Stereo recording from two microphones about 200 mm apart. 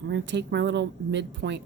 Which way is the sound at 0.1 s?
65° right (ahead or behind).